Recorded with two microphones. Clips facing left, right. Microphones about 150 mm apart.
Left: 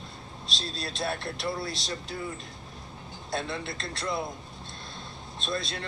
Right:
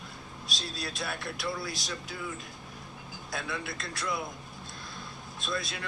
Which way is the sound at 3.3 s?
25° left (ahead or behind).